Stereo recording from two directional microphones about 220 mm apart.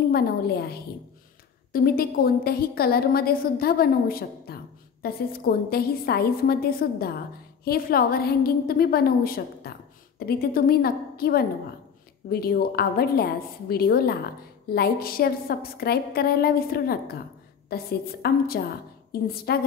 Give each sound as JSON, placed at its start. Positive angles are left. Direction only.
{"t": 0.1, "sound": "a woman's voice", "side_deg": 45}